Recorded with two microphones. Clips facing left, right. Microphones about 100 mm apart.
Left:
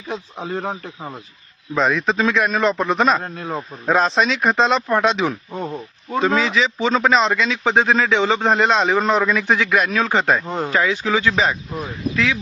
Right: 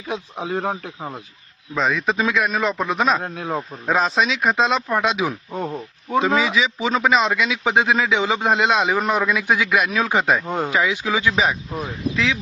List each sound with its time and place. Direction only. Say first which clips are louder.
0.1 s a man's voice: right 1 dB; 10° right (ahead or behind)